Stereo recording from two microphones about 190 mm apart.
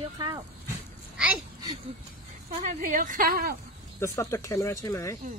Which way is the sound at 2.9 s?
45° right (ahead or behind).